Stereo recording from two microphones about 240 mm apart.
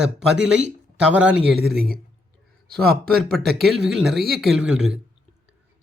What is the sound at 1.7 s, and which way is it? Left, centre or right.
Speech, right.